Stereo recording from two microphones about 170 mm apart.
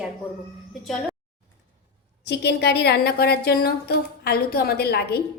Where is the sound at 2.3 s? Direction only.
80° left.